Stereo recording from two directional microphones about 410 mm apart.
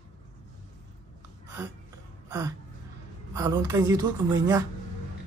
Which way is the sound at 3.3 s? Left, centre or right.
Centre.